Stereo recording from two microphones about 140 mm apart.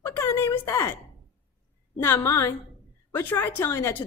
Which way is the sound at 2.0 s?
20° left (ahead or behind).